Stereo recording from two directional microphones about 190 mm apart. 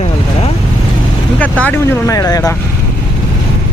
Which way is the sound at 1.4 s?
5° left (ahead or behind).